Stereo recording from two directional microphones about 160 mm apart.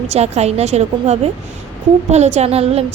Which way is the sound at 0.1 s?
40° right (ahead or behind).